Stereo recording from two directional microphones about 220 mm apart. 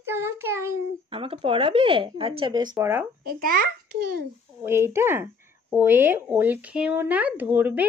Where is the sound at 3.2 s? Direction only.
40° right (ahead or behind).